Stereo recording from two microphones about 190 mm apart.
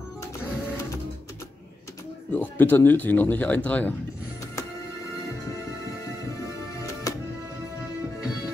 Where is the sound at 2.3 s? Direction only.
10° left (ahead or behind).